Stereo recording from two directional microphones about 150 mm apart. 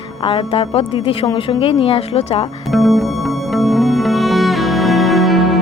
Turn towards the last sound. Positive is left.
turn(degrees=0)  # may be behind; listen again after turning